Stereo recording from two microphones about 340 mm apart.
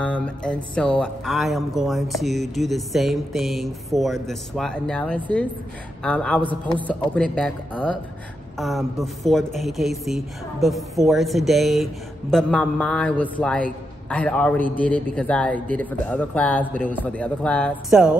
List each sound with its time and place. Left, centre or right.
0.0 s speech: centre